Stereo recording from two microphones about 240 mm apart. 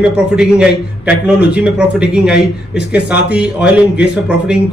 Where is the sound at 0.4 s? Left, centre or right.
Centre.